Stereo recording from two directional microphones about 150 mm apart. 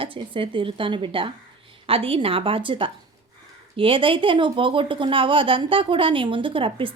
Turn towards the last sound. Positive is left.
turn(degrees=-35)  # may be behind; listen again after turning